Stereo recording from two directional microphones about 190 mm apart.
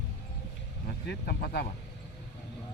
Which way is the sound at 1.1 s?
55° left (ahead or behind).